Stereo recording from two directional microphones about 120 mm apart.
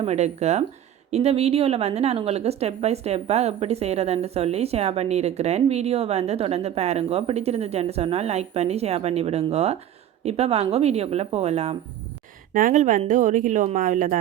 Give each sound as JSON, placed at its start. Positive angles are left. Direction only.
{"t": 0.0, "sound": "a woman's voice", "side_deg": -65}
{"t": 12.5, "sound": "speech", "side_deg": -90}